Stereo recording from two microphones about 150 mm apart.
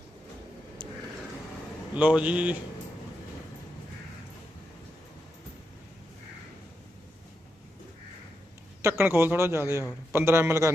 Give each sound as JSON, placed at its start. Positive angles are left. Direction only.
{"t": 0.8, "sound": "a sound", "side_deg": -30}
{"t": 2.0, "sound": "a man's voice", "side_deg": -10}
{"t": 8.8, "sound": "a man's voice", "side_deg": -15}